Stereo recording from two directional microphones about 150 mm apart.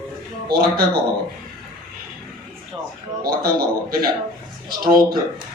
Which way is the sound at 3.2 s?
75° right (ahead or behind).